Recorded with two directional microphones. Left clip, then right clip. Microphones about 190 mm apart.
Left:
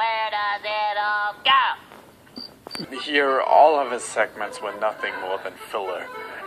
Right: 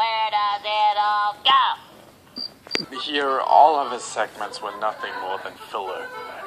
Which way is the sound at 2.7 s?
40° left (ahead or behind).